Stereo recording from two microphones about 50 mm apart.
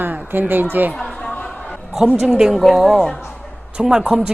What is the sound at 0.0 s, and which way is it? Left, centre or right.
Speech, right.